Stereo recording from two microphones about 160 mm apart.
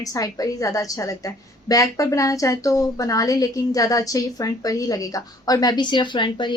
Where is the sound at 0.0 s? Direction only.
20° left (ahead or behind).